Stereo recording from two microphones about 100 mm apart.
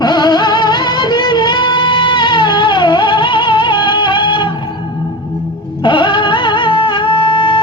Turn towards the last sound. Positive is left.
turn(degrees=55)  # may be behind; listen again after turning